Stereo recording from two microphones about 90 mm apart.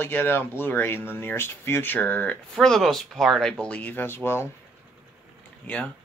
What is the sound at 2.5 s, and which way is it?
Speech, 5° left (ahead or behind).